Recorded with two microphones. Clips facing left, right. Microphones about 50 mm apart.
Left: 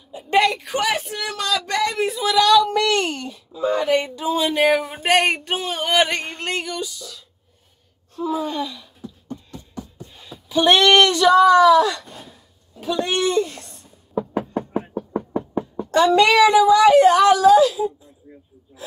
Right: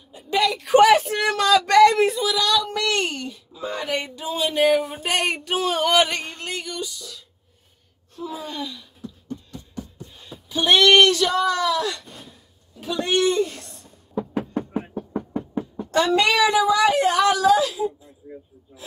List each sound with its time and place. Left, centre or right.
0.1 s a sound: left
0.4 s speech: centre
1.2 s a sound: centre
2.8 s speech: centre
5.0 s a sound: left
5.3 s speech: left
5.7 s music: centre
6.6 s speech: centre
8.2 s speech: centre
8.5 s beatboxing: centre
15.8 s a woman's voice: centre